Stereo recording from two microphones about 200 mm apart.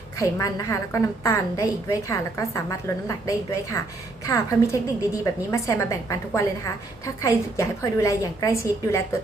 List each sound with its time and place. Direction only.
0.2 s a woman's voice: 15° left (ahead or behind)